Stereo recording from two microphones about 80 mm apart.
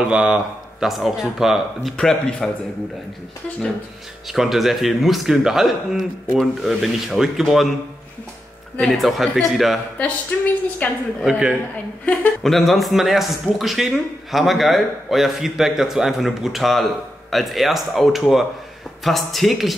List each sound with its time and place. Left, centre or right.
0.0 s a man's voice: centre
4.3 s a man's voice: centre
8.8 s a man's voice: centre
10.0 s a woman's voice: centre
11.2 s speech: centre
12.4 s a man's voice: centre